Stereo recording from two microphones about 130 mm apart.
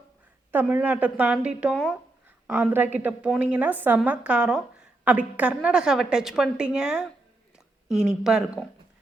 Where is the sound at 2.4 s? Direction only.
15° right (ahead or behind).